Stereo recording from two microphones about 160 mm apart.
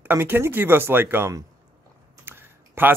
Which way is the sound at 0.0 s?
15° right (ahead or behind).